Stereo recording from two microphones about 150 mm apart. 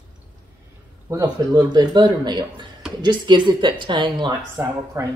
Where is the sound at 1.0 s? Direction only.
25° right (ahead or behind).